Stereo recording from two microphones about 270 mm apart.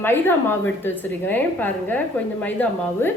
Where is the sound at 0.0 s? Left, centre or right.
Centre.